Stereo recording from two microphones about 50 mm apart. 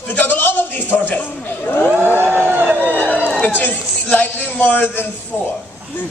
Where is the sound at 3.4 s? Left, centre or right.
Left.